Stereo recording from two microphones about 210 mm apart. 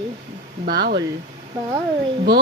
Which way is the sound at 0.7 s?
50° right (ahead or behind).